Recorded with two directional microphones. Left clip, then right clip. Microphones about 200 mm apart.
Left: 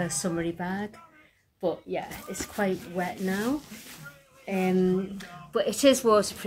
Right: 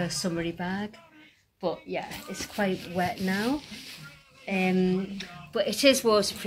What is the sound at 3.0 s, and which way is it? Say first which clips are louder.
Speech: right 4 dB; 20° right (ahead or behind).